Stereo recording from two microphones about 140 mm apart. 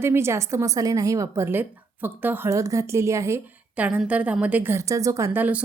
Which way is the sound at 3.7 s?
10° right (ahead or behind).